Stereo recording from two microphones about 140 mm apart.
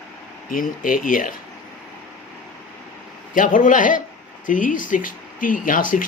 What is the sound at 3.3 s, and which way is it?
Speech, 70° left (ahead or behind).